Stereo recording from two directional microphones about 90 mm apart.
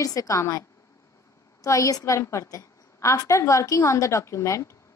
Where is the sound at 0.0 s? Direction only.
40° left (ahead or behind).